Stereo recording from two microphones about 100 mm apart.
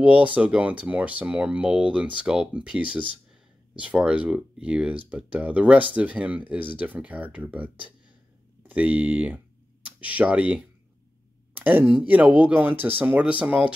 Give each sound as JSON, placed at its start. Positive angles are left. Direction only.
{"t": 0.0, "sound": "speech", "side_deg": -15}